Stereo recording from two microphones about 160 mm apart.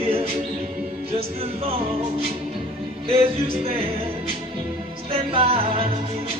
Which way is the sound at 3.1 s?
35° right (ahead or behind).